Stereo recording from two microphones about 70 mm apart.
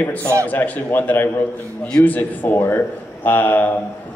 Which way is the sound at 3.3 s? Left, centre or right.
Left.